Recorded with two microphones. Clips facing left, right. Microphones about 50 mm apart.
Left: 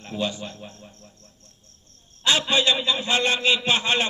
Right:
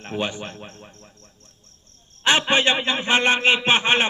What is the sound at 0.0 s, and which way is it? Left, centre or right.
A man's voice, right.